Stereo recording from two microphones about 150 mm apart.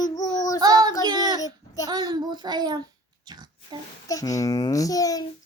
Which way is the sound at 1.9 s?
30° right (ahead or behind).